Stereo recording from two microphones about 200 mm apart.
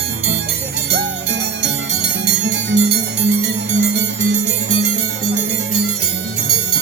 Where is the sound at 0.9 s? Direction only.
55° right (ahead or behind).